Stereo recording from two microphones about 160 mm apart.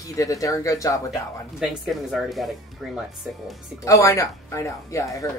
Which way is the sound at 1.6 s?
5° right (ahead or behind).